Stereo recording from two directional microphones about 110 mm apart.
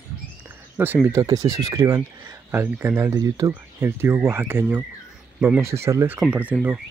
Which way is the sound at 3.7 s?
20° right (ahead or behind).